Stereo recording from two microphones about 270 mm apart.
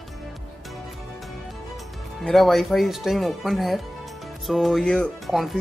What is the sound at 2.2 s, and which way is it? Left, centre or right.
Speech, centre.